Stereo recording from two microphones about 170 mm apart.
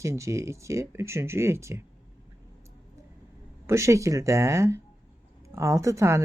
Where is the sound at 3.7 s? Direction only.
15° right (ahead or behind).